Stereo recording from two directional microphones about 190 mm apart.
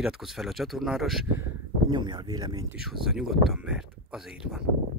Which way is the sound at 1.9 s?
20° right (ahead or behind).